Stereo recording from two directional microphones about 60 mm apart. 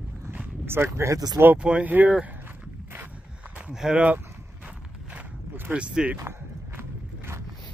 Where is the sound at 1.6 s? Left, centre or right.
Centre.